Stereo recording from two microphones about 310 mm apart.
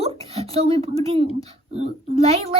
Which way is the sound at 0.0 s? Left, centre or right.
Centre.